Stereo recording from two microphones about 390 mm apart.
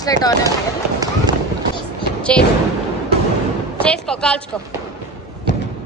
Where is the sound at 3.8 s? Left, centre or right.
Centre.